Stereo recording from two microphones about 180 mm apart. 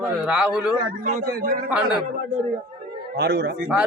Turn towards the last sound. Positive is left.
turn(degrees=-5)  # may be behind; listen again after turning